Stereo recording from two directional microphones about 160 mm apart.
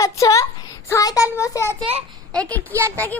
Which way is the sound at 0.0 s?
20° left (ahead or behind).